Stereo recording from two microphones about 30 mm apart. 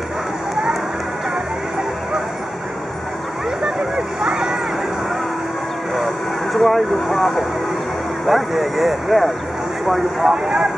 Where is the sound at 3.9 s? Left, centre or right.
Right.